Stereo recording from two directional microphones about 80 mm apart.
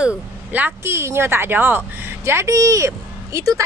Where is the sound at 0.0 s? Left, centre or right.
Centre.